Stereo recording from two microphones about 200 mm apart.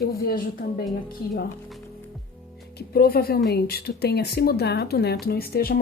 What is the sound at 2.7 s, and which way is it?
Speech, 50° left (ahead or behind).